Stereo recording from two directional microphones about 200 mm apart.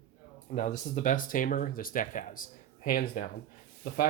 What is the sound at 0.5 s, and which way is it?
Speech, 35° left (ahead or behind).